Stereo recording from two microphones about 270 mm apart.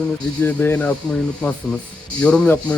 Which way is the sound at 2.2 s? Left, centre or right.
Centre.